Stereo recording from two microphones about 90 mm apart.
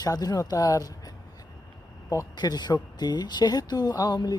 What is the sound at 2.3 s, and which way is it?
Speech, 50° left (ahead or behind).